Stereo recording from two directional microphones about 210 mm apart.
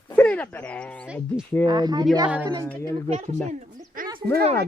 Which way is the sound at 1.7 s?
20° right (ahead or behind).